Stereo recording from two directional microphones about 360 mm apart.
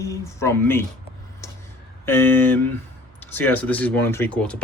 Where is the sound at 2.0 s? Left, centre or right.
Centre.